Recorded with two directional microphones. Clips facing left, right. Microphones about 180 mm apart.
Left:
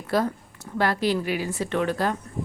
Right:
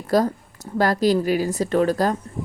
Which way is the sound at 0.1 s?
40° right (ahead or behind).